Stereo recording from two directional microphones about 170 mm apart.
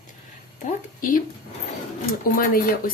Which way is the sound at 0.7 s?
50° left (ahead or behind).